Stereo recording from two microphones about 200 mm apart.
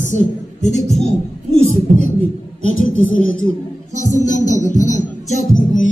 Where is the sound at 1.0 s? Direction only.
90° left.